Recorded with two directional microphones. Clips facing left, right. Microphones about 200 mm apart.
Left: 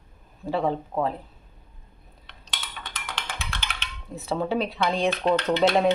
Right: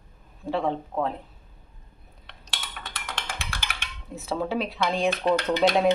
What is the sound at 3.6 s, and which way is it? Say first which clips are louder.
Speech: left 1 dB; 10° right (ahead or behind).